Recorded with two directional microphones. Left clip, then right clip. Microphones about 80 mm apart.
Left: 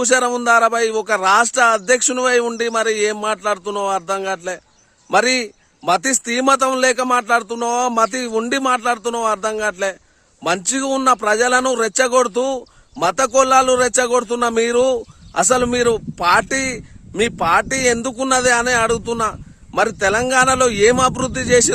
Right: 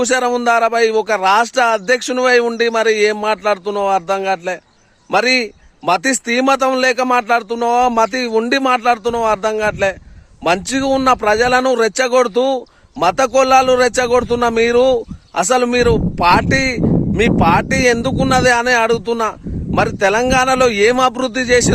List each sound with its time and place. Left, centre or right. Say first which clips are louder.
0.0 s a man's voice: right 1 dB; left